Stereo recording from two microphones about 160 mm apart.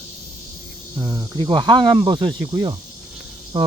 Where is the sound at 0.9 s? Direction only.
20° right (ahead or behind).